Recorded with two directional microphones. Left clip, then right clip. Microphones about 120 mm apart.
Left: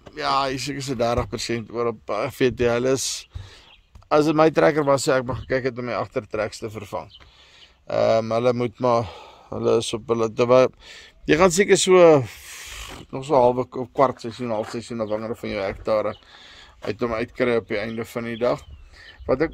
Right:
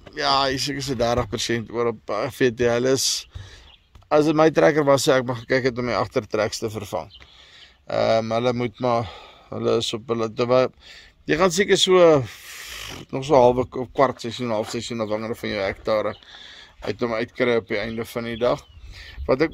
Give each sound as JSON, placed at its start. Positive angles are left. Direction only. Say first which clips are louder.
{"t": 0.1, "sound": "speech", "louder": "right 2 dB", "side_deg": -10}
{"t": 4.1, "sound": "speech", "louder": "even", "side_deg": 15}
{"t": 4.8, "sound": "speech", "louder": "right 2 dB", "side_deg": -10}
{"t": 5.5, "sound": "speech", "louder": "right 3 dB", "side_deg": -30}
{"t": 6.7, "sound": "speech", "louder": "right 3 dB", "side_deg": -25}
{"t": 7.9, "sound": "a man's voice", "louder": "left 1 dB", "side_deg": 25}
{"t": 9.5, "sound": "a man's voice", "louder": "left 1 dB", "side_deg": 25}
{"t": 11.5, "sound": "a man's voice", "louder": "left 1 dB", "side_deg": 50}
{"t": 12.4, "sound": "a sound", "louder": "right 2 dB", "side_deg": 0}
{"t": 12.8, "sound": "speech", "louder": "right 4 dB", "side_deg": -15}
{"t": 13.6, "sound": "speech", "louder": "even", "side_deg": 5}
{"t": 14.2, "sound": "speech", "louder": "right 1 dB", "side_deg": -5}
{"t": 19.2, "sound": "speech", "louder": "right 1 dB", "side_deg": -10}